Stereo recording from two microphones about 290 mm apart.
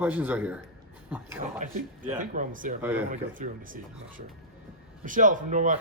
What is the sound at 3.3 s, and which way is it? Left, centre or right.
Speech, right.